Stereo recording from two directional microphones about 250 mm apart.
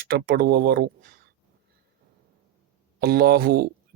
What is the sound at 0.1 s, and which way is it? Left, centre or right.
Speech, right.